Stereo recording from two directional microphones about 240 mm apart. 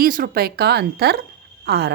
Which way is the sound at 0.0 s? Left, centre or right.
Right.